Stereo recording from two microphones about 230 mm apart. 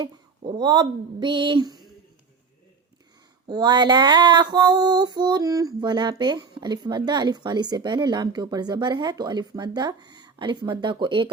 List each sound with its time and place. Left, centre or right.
0.0 s female singing: centre
3.4 s female singing: centre